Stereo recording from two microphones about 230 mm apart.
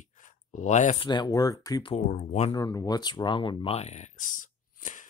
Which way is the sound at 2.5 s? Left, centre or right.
Centre.